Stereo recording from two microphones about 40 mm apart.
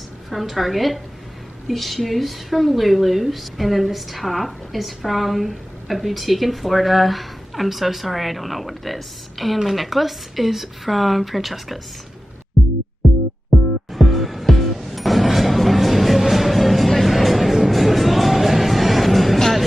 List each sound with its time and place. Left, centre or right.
0.3 s a woman's voice: centre
13.5 s music: centre